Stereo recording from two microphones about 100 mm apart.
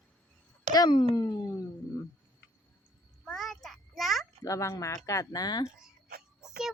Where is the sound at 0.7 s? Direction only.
45° left (ahead or behind).